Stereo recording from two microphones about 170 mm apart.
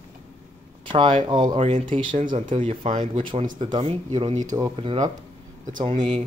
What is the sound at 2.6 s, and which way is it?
Speech, 30° right (ahead or behind).